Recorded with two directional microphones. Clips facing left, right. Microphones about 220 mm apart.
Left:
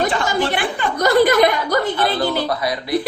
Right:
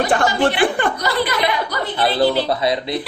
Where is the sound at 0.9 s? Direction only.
45° left (ahead or behind).